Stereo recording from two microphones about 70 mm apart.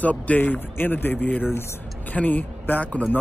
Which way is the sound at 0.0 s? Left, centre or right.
Left.